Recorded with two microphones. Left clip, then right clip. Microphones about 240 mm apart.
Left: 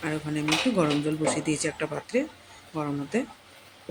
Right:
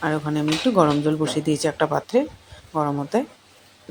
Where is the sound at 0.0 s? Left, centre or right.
Centre.